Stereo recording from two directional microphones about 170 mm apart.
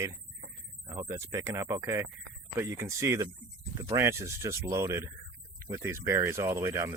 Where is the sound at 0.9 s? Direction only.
30° right (ahead or behind).